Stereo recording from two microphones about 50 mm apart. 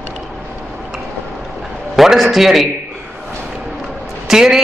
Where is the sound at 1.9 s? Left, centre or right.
Centre.